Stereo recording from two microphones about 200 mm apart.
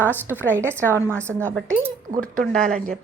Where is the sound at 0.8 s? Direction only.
10° left (ahead or behind).